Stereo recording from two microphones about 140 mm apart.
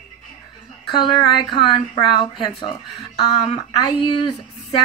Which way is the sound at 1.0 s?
35° left (ahead or behind).